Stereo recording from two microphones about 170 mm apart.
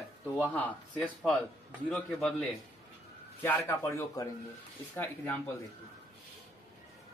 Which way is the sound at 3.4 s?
15° left (ahead or behind).